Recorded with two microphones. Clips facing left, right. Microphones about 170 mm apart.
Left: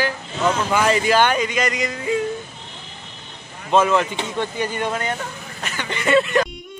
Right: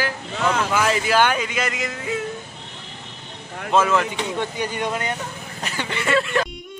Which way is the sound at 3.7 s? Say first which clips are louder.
Left 2 dB; centre (ahead or behind).